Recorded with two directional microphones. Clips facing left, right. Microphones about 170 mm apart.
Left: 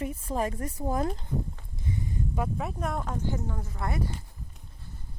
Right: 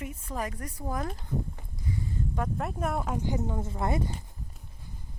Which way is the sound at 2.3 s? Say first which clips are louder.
Even; 10° left (ahead or behind).